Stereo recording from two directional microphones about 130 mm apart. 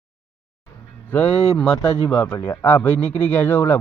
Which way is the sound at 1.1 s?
10° left (ahead or behind).